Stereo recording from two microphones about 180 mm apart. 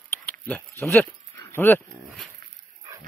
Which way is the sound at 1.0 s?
15° left (ahead or behind).